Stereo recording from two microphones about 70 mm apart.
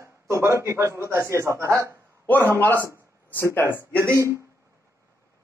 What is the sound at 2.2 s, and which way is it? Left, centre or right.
A man's voice, left.